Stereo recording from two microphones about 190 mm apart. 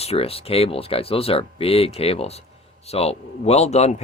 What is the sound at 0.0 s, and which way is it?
Speech, 30° left (ahead or behind).